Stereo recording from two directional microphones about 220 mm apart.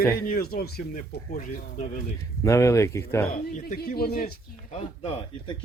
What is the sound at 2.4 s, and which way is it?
Speech, 15° left (ahead or behind).